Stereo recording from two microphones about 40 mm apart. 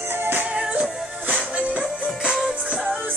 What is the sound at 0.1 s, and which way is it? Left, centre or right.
Music, right.